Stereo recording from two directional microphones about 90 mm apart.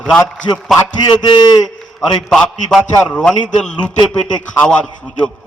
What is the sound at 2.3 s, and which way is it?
A man's voice, 5° left (ahead or behind).